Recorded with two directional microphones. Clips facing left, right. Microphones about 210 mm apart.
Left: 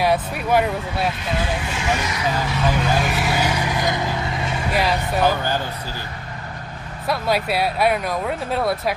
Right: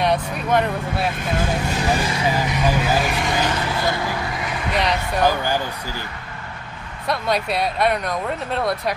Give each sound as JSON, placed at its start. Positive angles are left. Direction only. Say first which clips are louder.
{"t": 0.0, "sound": "speech", "louder": "left 1 dB", "side_deg": 5}
{"t": 1.1, "sound": "speech", "louder": "right 2 dB", "side_deg": -45}
{"t": 2.4, "sound": "speech", "louder": "right 1 dB", "side_deg": -15}
{"t": 3.0, "sound": "vehicle", "louder": "even", "side_deg": 5}
{"t": 4.7, "sound": "speech", "louder": "left 1 dB", "side_deg": 5}
{"t": 7.1, "sound": "speech", "louder": "left 1 dB", "side_deg": 5}